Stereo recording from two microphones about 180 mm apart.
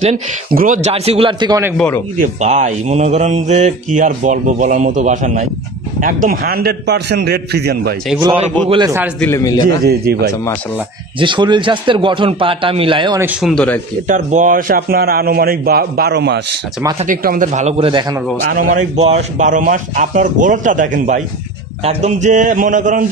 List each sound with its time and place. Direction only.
0.5 s speech: 50° right (ahead or behind)
0.9 s speech: 35° right (ahead or behind)
2.1 s a man's voice: 45° right (ahead or behind); by 7.9 s 65° right (ahead or behind)
8.6 s a man's voice: 25° right (ahead or behind)
9.2 s a man's voice: 15° left (ahead or behind)
9.8 s a man's voice: 60° right (ahead or behind)
11.1 s a man's voice: 25° right (ahead or behind)
13.2 s speech: centre (ahead or behind)
14.0 s a man's voice: 45° right (ahead or behind); by 16.3 s 65° right (ahead or behind)
17.0 s speech: 50° right (ahead or behind); by 18.0 s 30° right (ahead or behind)
18.5 s speech: 50° right (ahead or behind)